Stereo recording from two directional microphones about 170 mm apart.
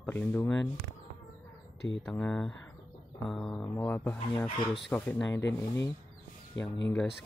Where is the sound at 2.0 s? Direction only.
5° left (ahead or behind).